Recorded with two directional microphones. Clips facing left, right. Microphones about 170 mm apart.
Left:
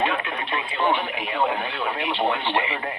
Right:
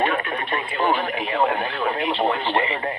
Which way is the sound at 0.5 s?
40° right (ahead or behind).